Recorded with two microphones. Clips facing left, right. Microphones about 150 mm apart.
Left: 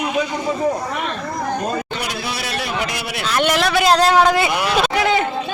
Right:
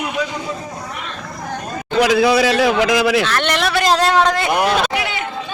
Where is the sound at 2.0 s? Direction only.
90° right.